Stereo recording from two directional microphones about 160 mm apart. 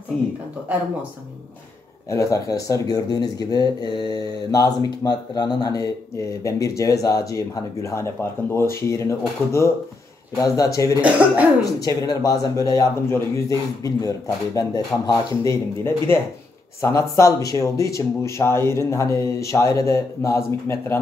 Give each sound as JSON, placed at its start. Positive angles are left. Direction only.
{"t": 2.0, "sound": "speech", "side_deg": 20}
{"t": 11.0, "sound": "speech", "side_deg": -10}
{"t": 11.6, "sound": "speech", "side_deg": 25}